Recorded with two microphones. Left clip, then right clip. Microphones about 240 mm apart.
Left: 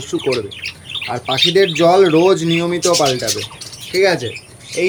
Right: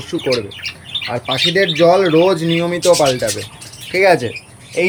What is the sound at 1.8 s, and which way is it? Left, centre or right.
Speech, centre.